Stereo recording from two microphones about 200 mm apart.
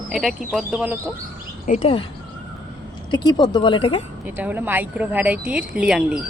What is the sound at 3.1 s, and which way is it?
Speech, 20° left (ahead or behind).